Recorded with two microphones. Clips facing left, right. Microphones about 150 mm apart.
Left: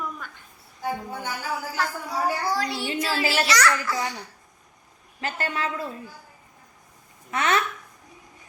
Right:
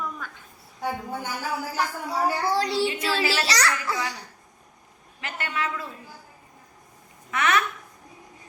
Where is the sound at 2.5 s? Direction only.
30° right (ahead or behind).